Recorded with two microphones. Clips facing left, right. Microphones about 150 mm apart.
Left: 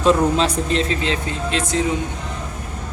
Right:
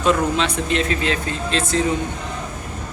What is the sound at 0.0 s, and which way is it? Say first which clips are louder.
Speech: left 3 dB; 35° left (ahead or behind).